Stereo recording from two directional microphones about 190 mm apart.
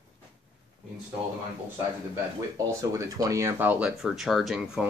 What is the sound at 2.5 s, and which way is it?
Speech, 15° right (ahead or behind).